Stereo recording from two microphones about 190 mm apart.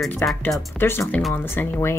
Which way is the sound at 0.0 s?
Centre (ahead or behind).